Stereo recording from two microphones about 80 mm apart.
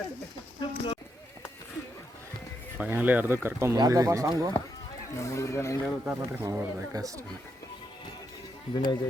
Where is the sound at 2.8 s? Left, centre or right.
Right.